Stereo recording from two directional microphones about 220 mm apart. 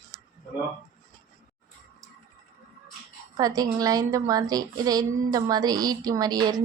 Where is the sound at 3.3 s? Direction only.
15° right (ahead or behind).